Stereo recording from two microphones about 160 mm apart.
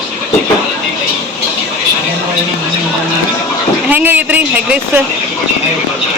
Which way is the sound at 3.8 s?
10° right (ahead or behind).